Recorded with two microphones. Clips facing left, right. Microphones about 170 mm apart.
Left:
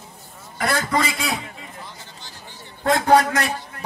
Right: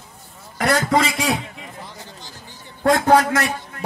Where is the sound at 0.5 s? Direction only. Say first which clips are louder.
Right 4 dB; 90° right.